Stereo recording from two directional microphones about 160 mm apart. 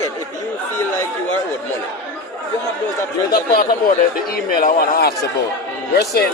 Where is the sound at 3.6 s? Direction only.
65° left (ahead or behind).